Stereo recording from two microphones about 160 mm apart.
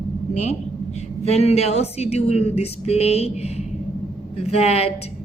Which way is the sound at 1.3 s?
40° left (ahead or behind).